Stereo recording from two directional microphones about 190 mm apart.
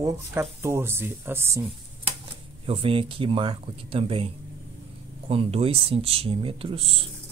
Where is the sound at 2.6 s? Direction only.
30° right (ahead or behind).